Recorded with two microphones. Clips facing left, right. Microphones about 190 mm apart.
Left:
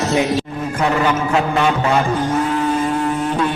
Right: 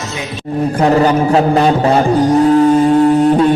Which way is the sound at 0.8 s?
35° right (ahead or behind).